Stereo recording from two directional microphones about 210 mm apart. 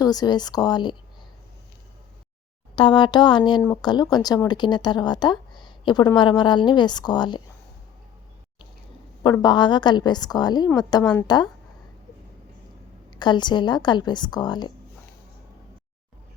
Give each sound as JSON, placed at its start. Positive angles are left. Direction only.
{"t": 0.0, "sound": "speech", "side_deg": 20}
{"t": 2.7, "sound": "speech", "side_deg": 20}
{"t": 9.2, "sound": "speech", "side_deg": 20}
{"t": 11.0, "sound": "a woman's voice", "side_deg": 5}
{"t": 13.1, "sound": "speech", "side_deg": 20}